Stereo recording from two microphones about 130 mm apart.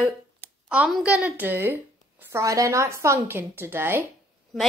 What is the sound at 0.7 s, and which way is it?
A woman's voice, 5° right (ahead or behind).